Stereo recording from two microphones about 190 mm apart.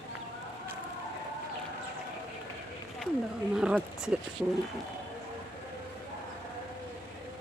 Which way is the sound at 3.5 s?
5° right (ahead or behind).